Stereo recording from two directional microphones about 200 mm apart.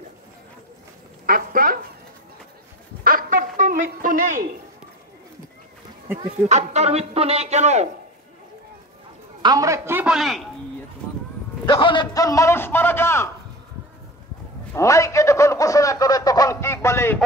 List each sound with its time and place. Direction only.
1.2 s a sound: 45° right (ahead or behind)
3.0 s a sound: 45° right (ahead or behind)
6.5 s speech: 35° right (ahead or behind)
9.4 s a man's voice: 20° right (ahead or behind); by 10.4 s centre (ahead or behind)
11.6 s a man's voice: 25° left (ahead or behind)
14.7 s a man's voice: 15° left (ahead or behind)